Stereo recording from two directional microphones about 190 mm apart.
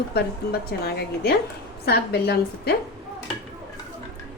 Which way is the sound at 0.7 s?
55° left (ahead or behind).